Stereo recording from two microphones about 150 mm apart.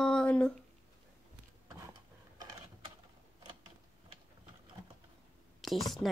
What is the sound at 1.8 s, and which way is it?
Tick-tock, 25° right (ahead or behind).